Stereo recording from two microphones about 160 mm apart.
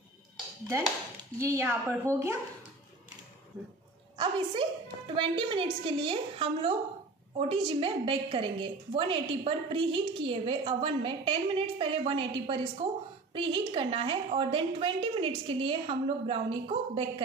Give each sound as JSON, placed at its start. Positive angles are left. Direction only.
{"t": 1.4, "sound": "a woman's voice", "side_deg": -15}
{"t": 4.2, "sound": "a woman's voice", "side_deg": -35}